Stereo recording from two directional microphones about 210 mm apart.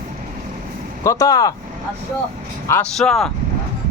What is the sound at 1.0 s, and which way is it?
Speech, 15° left (ahead or behind).